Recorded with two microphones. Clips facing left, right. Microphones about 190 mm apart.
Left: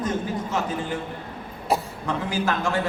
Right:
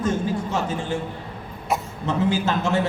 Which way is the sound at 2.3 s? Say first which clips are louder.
Right 2 dB; 25° right (ahead or behind).